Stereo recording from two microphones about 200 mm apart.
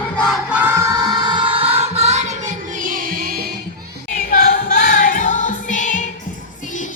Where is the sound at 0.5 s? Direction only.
10° right (ahead or behind).